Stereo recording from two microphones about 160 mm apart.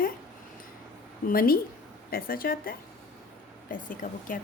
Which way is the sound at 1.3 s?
70° left (ahead or behind).